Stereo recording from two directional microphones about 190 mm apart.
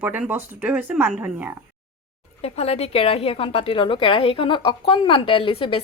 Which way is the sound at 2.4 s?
30° left (ahead or behind).